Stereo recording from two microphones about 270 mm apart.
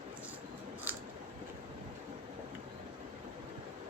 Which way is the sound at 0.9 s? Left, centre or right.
Centre.